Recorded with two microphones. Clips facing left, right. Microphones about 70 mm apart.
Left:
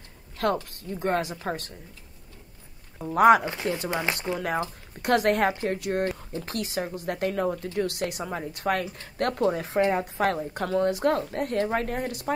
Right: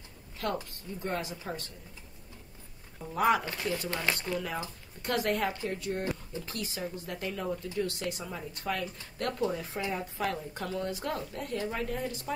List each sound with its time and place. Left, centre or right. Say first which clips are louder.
0.7 s speech: left 8 dB; left
3.2 s speech: left 9 dB; left
3.4 s speech: left 5 dB; left
4.4 s speech: left 7 dB; left
8.2 s a woman's voice: left 8 dB; left